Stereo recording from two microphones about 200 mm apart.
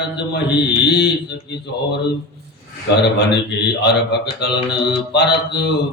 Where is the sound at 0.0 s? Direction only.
55° left (ahead or behind).